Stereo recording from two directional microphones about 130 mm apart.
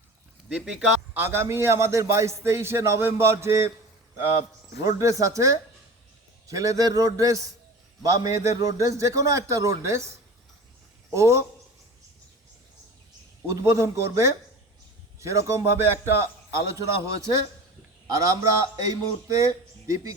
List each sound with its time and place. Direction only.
0.4 s a man's voice: 5° right (ahead or behind)
1.2 s a man's voice: 20° right (ahead or behind)
4.9 s a man's voice: 25° right (ahead or behind)
11.1 s a man's voice: 20° right (ahead or behind)
13.5 s a man's voice: 20° right (ahead or behind)